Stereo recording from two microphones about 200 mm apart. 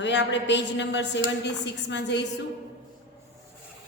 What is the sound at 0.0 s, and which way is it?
A woman's voice, 60° left (ahead or behind).